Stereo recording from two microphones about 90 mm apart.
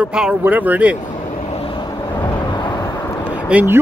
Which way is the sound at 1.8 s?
55° left (ahead or behind).